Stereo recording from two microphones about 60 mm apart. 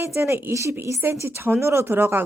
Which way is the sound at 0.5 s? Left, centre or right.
Right.